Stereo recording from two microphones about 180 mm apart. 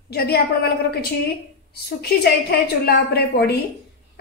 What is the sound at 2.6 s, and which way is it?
A woman's voice, 65° left (ahead or behind).